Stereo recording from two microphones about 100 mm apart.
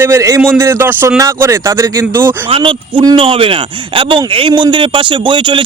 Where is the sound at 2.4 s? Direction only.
60° right (ahead or behind).